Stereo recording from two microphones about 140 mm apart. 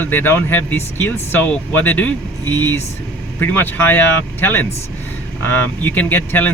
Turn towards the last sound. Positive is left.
turn(degrees=15)  # may be behind; listen again after turning